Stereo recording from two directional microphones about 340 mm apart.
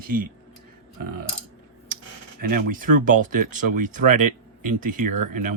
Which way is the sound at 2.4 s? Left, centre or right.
Right.